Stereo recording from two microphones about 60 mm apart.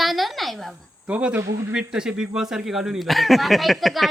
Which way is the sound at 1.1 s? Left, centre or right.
Right.